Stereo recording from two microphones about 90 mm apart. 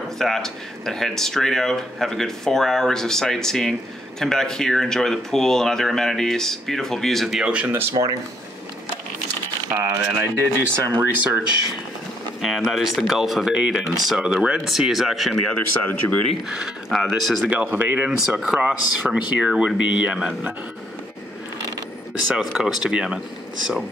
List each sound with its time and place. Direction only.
0.2 s speech: 5° left (ahead or behind); by 7.7 s 10° right (ahead or behind)
8.0 s speech: 55° right (ahead or behind)
9.7 s speech: 25° right (ahead or behind)
12.4 s speech: centre (ahead or behind)
15.9 s speech: 15° left (ahead or behind)
16.4 s speech: 5° right (ahead or behind)
17.5 s speech: 20° right (ahead or behind)
18.4 s speech: 10° right (ahead or behind)
22.3 s speech: 10° right (ahead or behind)